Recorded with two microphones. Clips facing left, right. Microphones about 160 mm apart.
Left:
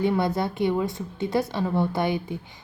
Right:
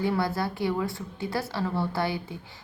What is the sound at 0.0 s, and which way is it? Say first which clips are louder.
A woman's voice: left 3 dB; 20° left (ahead or behind).